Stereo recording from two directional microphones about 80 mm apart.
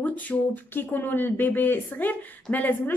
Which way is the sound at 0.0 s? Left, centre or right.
Centre.